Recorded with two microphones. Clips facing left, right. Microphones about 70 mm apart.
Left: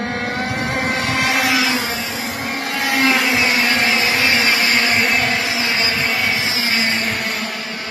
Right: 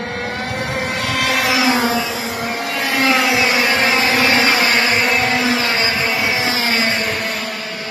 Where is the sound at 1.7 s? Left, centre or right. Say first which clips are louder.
Right 5 dB; right.